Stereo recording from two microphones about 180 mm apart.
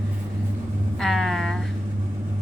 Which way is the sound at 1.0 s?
Centre (ahead or behind).